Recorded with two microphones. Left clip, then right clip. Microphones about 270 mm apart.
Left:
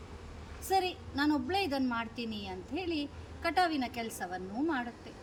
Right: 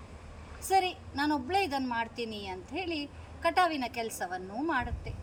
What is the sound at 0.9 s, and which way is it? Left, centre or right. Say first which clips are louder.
Speech: right 1 dB; centre.